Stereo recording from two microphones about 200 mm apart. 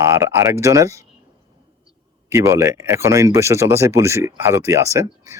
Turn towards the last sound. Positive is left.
turn(degrees=-15)  # may be behind; listen again after turning